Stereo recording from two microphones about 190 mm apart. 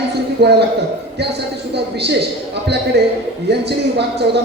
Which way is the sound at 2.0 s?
60° right (ahead or behind).